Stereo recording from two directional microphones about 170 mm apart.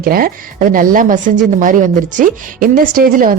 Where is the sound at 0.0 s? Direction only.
60° right (ahead or behind).